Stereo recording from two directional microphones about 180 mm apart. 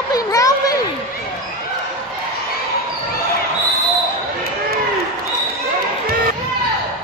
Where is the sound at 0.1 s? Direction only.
20° left (ahead or behind).